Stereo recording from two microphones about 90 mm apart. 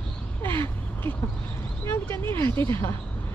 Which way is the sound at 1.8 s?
25° left (ahead or behind).